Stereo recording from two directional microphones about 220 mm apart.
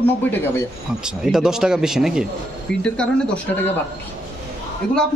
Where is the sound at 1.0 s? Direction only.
Centre (ahead or behind).